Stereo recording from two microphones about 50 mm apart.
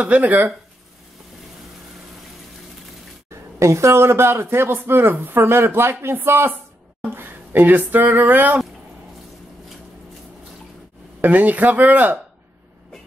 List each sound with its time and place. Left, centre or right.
0.0 s speech: right
3.5 s a man's voice: right
11.1 s speech: right